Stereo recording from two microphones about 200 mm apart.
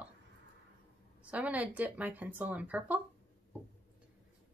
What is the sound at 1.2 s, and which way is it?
A woman's voice, 5° right (ahead or behind).